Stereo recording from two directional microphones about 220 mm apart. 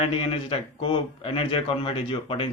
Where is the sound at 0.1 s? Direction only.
25° left (ahead or behind).